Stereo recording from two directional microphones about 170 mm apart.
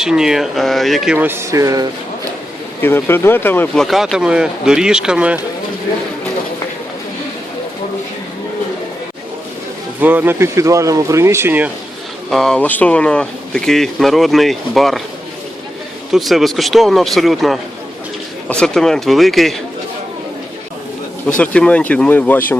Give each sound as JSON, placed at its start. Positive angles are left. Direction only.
{"t": 0.0, "sound": "speech", "side_deg": -5}
{"t": 2.8, "sound": "speech", "side_deg": 15}
{"t": 3.8, "sound": "speech", "side_deg": 0}
{"t": 10.0, "sound": "speech", "side_deg": -10}
{"t": 12.3, "sound": "speech", "side_deg": 5}
{"t": 16.1, "sound": "speech", "side_deg": 0}
{"t": 21.3, "sound": "speech", "side_deg": 5}